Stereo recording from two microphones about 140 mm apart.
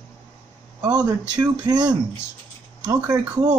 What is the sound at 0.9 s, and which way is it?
Speech, 30° right (ahead or behind).